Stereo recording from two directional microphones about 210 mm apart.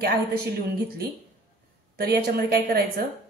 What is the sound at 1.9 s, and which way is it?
Speech, 45° right (ahead or behind).